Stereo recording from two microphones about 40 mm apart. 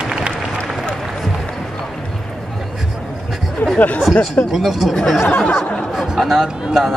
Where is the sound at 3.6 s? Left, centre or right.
Left.